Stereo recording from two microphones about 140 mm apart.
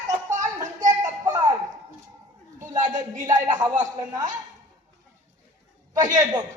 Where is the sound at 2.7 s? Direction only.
65° right (ahead or behind).